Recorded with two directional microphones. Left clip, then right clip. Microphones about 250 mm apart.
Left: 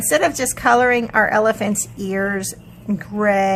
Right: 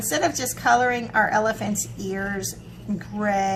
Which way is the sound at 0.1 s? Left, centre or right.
Left.